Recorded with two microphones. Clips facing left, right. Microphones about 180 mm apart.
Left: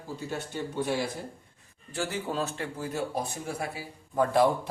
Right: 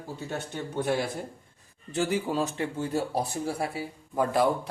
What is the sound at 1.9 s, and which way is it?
Speech, 15° right (ahead or behind).